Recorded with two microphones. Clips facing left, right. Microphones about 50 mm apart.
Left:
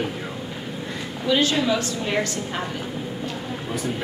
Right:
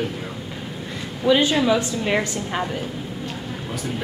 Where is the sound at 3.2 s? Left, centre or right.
Centre.